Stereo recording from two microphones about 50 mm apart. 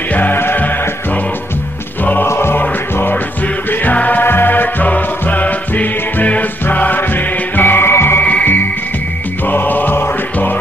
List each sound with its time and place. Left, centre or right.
0.1 s music: left
2.2 s music: left
3.8 s music: left
4.2 s music: left
8.2 s music: left